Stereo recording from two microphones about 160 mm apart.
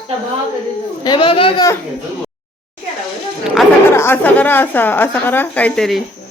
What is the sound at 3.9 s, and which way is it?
A woman's voice, 15° left (ahead or behind).